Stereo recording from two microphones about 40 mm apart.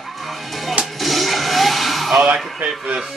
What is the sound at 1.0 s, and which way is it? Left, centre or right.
Music, centre.